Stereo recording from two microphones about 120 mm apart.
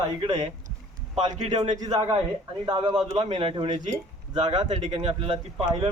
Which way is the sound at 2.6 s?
35° right (ahead or behind).